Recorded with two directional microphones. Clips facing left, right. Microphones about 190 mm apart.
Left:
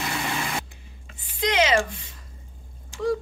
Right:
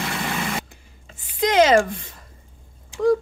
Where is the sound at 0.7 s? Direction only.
45° right (ahead or behind).